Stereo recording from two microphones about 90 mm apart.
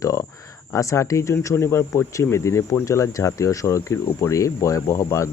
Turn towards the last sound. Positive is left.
turn(degrees=35)  # may be behind; listen again after turning